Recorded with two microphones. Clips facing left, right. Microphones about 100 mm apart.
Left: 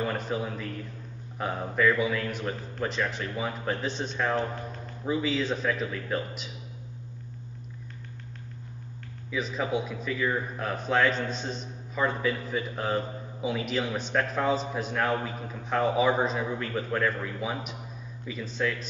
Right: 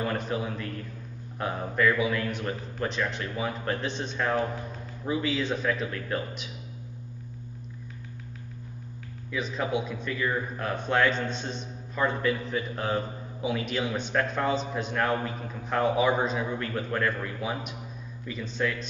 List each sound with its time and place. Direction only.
0.0 s a man's voice: centre (ahead or behind)
9.3 s a man's voice: centre (ahead or behind)